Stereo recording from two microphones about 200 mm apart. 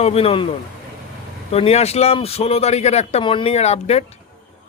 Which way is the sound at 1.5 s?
30° left (ahead or behind).